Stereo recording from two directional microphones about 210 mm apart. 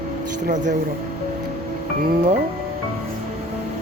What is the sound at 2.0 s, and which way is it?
Speech, 35° right (ahead or behind).